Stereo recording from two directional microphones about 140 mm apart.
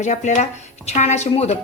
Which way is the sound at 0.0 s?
55° left (ahead or behind).